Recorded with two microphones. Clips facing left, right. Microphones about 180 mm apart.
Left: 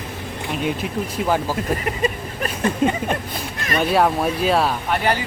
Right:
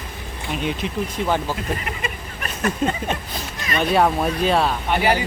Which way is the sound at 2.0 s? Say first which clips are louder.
Left 11 dB; 35° left (ahead or behind).